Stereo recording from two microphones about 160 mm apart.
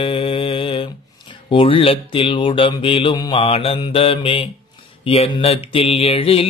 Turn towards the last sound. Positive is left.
turn(degrees=35)  # may be behind; listen again after turning